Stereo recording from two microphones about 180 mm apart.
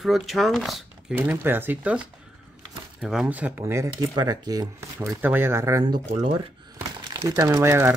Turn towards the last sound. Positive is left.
turn(degrees=-15)  # may be behind; listen again after turning